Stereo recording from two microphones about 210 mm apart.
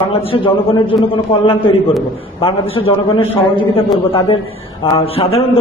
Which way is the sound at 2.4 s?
25° left (ahead or behind).